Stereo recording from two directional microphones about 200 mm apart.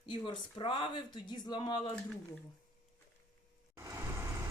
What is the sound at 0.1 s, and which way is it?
Speech, 25° left (ahead or behind).